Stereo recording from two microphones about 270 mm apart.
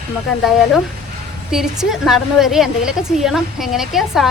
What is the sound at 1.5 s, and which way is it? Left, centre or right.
Speech, centre.